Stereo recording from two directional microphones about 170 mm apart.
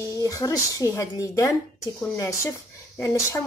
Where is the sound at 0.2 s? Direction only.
20° left (ahead or behind).